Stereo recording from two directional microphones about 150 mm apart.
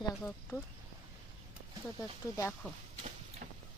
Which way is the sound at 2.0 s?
20° left (ahead or behind).